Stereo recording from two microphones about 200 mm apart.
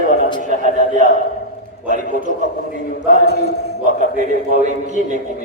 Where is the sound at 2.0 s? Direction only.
40° left (ahead or behind).